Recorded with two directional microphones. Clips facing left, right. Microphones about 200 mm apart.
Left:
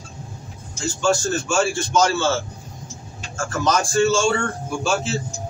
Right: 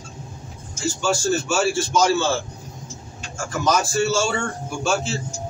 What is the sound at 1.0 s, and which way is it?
A man's voice, 10° right (ahead or behind).